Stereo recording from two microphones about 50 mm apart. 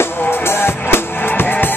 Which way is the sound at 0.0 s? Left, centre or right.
Left.